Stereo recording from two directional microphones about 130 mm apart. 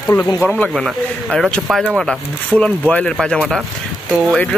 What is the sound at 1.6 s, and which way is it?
Speech, 5° right (ahead or behind).